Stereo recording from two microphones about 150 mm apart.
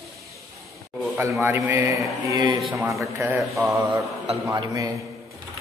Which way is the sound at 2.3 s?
30° right (ahead or behind).